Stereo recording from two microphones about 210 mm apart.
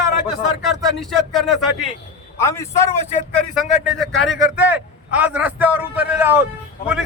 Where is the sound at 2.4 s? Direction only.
15° left (ahead or behind).